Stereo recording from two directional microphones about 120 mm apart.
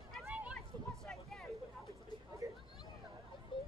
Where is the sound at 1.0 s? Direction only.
Centre (ahead or behind).